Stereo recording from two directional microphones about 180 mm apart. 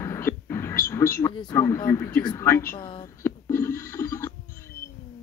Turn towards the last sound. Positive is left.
turn(degrees=15)  # may be behind; listen again after turning